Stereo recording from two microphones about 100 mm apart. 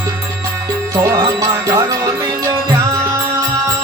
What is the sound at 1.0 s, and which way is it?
Music, 40° right (ahead or behind).